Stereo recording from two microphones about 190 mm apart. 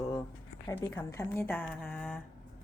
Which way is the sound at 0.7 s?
10° left (ahead or behind).